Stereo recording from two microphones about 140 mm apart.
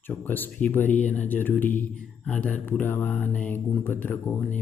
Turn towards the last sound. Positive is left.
turn(degrees=15)  # may be behind; listen again after turning